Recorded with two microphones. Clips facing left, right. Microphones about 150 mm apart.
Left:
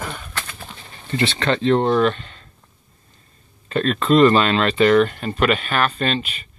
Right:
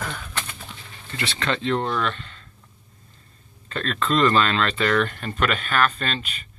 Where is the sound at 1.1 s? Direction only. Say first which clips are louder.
Left 7 dB; 25° left (ahead or behind).